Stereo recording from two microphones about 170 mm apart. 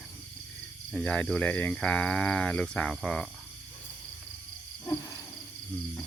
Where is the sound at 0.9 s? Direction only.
5° left (ahead or behind).